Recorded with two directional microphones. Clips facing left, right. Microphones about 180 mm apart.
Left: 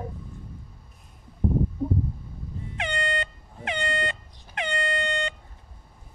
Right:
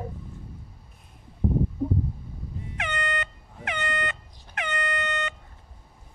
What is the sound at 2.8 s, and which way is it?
Air horn, 30° left (ahead or behind).